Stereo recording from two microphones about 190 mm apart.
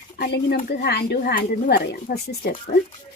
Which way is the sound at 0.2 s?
50° left (ahead or behind).